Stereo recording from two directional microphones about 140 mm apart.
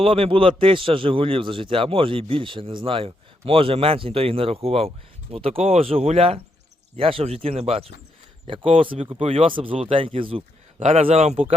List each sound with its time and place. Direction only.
0.0 s a man's voice: 40° right (ahead or behind)
10.8 s speech: 50° right (ahead or behind)